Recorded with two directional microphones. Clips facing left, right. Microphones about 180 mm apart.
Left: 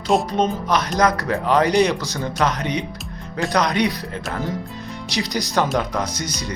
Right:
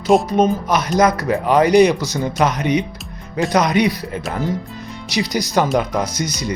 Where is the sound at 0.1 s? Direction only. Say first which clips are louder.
Right 5 dB; 5° right (ahead or behind).